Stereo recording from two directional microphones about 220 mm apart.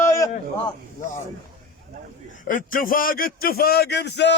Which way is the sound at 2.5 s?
40° left (ahead or behind).